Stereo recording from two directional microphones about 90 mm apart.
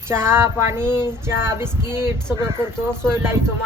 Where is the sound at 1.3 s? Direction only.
25° right (ahead or behind).